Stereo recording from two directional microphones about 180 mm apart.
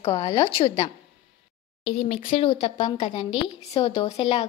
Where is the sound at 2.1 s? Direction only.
30° left (ahead or behind).